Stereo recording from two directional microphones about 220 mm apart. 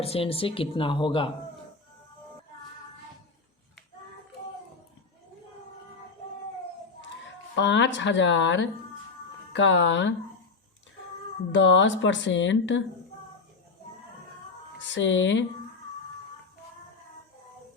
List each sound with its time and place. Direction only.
0.0 s speech: 25° left (ahead or behind)
7.5 s speech: 55° left (ahead or behind)
11.5 s speech: 55° left (ahead or behind)
14.8 s speech: 55° left (ahead or behind)